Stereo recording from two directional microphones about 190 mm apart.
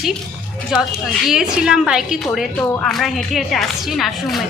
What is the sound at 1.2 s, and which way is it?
A woman's voice, centre (ahead or behind).